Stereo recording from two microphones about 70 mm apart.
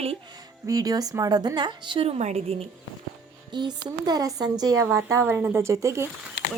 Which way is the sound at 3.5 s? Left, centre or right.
Right.